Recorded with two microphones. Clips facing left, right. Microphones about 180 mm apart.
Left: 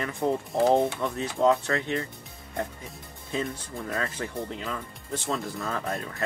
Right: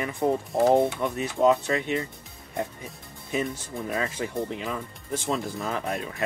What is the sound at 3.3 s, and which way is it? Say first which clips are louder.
Speech: right 2 dB; 15° right (ahead or behind).